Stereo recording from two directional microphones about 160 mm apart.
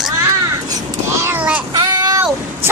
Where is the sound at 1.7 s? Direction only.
25° right (ahead or behind).